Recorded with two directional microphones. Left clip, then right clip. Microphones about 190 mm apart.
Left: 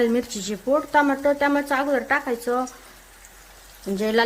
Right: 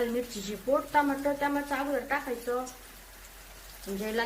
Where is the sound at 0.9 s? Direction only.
55° left (ahead or behind).